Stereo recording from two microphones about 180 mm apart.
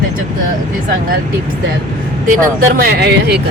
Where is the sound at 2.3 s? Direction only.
50° right (ahead or behind); by 3.4 s 65° right (ahead or behind).